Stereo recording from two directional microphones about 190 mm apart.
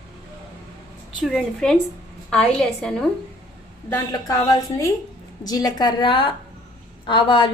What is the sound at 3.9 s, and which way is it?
A woman's voice, 15° left (ahead or behind).